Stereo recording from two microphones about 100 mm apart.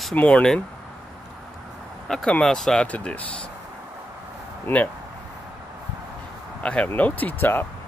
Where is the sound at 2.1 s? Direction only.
5° left (ahead or behind).